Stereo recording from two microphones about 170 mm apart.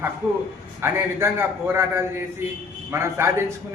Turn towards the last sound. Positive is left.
turn(degrees=-15)  # may be behind; listen again after turning